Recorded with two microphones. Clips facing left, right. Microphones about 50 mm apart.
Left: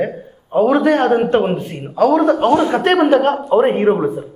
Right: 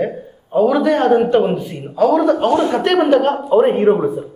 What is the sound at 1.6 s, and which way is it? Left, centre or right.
Speech, left.